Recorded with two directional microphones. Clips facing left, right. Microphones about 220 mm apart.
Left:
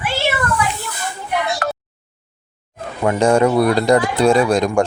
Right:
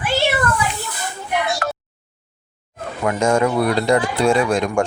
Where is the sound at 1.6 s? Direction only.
35° left (ahead or behind).